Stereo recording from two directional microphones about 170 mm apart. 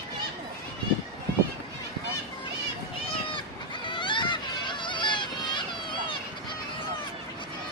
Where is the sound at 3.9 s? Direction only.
30° left (ahead or behind).